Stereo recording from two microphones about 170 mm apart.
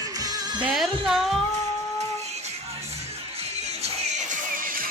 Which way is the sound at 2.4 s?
35° right (ahead or behind).